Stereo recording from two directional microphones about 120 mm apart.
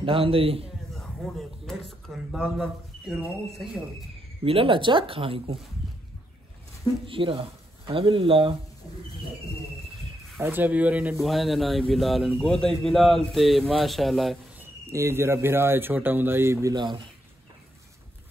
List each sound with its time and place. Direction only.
0.0 s speech: 50° right (ahead or behind)
0.9 s a sound: 5° left (ahead or behind)
2.3 s a man's voice: 10° right (ahead or behind)
4.5 s speech: 50° right (ahead or behind)
7.1 s speech: 50° right (ahead or behind)
10.4 s a man's voice: 15° right (ahead or behind)
11.1 s speech: centre (ahead or behind)
14.6 s speech: 20° right (ahead or behind)
16.7 s speech: 40° right (ahead or behind)